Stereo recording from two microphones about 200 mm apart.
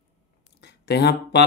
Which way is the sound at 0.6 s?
55° left (ahead or behind).